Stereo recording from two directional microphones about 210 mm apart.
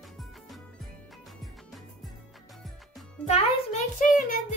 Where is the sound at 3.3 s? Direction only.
30° left (ahead or behind).